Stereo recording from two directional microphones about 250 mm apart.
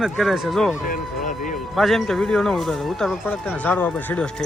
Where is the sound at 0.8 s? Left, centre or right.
Left.